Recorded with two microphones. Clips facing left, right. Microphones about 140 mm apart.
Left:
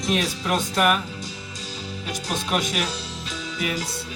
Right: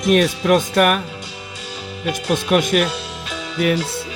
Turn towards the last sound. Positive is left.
turn(degrees=-70)  # may be behind; listen again after turning